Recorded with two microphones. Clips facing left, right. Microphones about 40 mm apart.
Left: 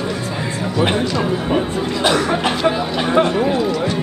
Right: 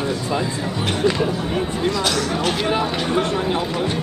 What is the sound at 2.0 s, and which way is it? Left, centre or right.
Chatter, left.